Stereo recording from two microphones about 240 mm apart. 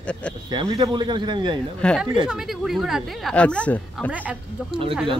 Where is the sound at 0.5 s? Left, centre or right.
Centre.